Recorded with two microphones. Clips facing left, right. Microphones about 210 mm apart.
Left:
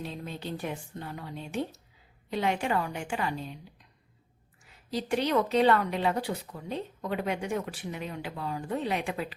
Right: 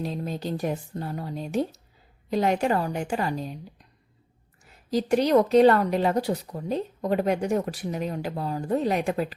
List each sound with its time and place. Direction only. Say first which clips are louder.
0.0 s speech: right 7 dB; 40° right (ahead or behind)
4.6 s speech: right 7 dB; 40° right (ahead or behind)